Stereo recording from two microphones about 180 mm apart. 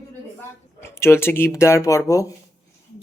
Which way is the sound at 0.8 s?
15° left (ahead or behind).